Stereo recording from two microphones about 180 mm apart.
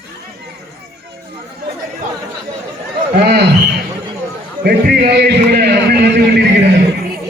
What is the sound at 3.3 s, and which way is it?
Speech, 65° right (ahead or behind).